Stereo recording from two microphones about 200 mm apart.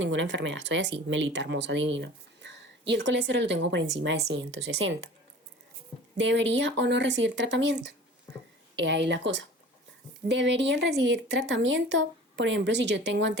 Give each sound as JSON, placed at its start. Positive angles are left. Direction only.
{"t": 0.0, "sound": "speech", "side_deg": -65}
{"t": 6.1, "sound": "speech", "side_deg": -65}